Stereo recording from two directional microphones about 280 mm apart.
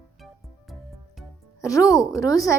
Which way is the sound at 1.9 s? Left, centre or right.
Centre.